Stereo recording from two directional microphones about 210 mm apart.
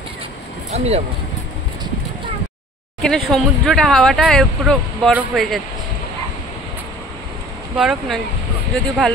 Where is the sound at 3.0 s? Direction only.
Centre (ahead or behind).